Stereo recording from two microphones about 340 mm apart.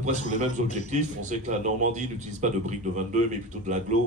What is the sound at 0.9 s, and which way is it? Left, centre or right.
A man's voice, right.